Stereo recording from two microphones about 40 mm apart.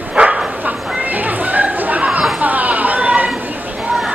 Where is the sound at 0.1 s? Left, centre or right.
Right.